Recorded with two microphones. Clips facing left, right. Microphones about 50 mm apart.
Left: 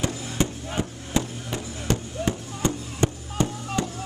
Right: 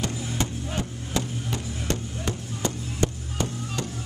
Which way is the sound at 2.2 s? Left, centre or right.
Left.